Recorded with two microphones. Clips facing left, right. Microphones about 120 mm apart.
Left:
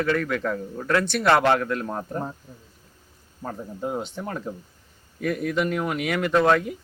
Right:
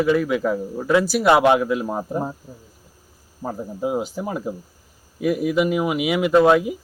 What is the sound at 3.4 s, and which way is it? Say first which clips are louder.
A man's voice: right 5 dB; 15° right (ahead or behind).